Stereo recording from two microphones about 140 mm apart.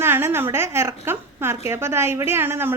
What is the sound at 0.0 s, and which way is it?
A woman's voice, 15° right (ahead or behind).